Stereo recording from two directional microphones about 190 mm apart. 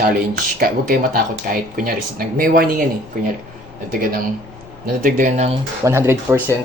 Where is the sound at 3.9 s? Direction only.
45° right (ahead or behind).